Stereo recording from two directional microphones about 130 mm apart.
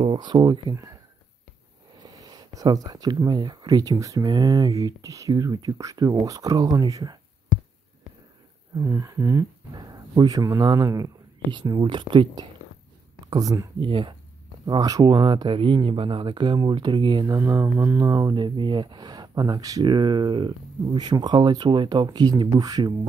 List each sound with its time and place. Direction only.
0.0 s speech: 35° right (ahead or behind)
2.0 s speech: 30° right (ahead or behind)
8.7 s speech: 25° right (ahead or behind)
13.3 s speech: 30° right (ahead or behind)
13.7 s speech: 40° right (ahead or behind); by 18.1 s 20° right (ahead or behind)
18.1 s speech: 35° right (ahead or behind)